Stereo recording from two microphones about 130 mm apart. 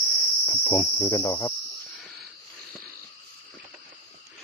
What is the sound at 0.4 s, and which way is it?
Insect, 20° left (ahead or behind).